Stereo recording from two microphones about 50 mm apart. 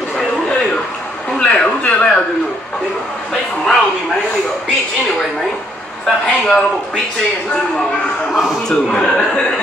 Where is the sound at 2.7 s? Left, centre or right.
Centre.